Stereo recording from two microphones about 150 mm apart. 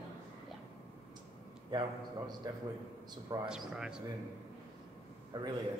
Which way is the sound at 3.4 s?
5° right (ahead or behind).